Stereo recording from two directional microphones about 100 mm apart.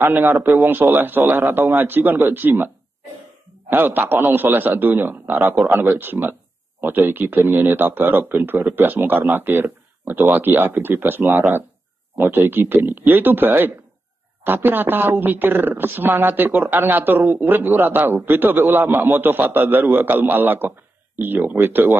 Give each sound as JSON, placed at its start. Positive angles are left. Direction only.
{"t": 0.0, "sound": "a woman's voice", "side_deg": -20}
{"t": 3.7, "sound": "a woman's voice", "side_deg": -20}